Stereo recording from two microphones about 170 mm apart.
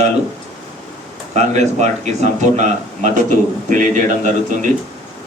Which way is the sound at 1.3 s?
40° right (ahead or behind).